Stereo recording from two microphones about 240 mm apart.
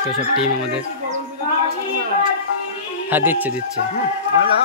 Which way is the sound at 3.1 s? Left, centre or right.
Centre.